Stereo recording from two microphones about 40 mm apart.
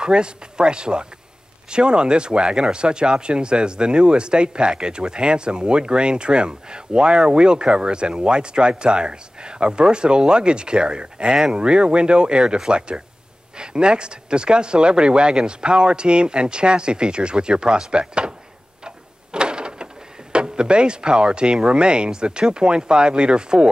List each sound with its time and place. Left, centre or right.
0.0 s speech: right
18.9 s a sound: right
20.3 s speech: right